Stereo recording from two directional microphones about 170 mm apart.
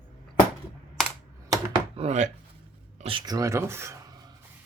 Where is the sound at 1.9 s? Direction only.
40° right (ahead or behind).